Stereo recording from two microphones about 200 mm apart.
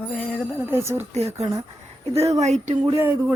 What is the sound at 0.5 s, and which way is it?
Speech, 10° right (ahead or behind).